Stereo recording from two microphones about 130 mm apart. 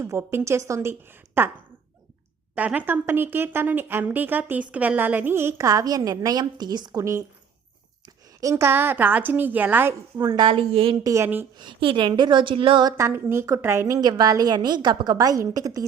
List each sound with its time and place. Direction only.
0.0 s a woman's voice: 20° right (ahead or behind)
2.6 s a woman's voice: 10° right (ahead or behind)
10.2 s a woman's voice: 25° right (ahead or behind)
10.4 s a woman's voice: 45° right (ahead or behind)
11.0 s a woman's voice: 25° right (ahead or behind)
11.5 s a woman's voice: 40° right (ahead or behind)
13.0 s a woman's voice: 20° right (ahead or behind)